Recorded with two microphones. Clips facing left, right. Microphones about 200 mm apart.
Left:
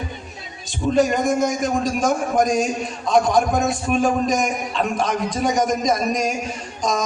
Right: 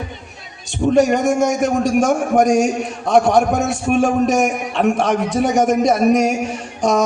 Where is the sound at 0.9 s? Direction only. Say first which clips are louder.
Right 4 dB; 70° right (ahead or behind).